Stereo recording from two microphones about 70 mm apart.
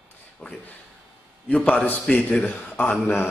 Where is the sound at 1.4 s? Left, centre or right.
Centre.